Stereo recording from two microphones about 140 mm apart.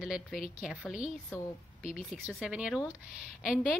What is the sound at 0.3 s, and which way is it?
Speech, 75° left (ahead or behind).